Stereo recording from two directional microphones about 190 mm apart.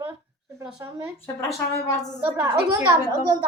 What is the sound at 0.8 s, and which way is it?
Speech, 15° right (ahead or behind).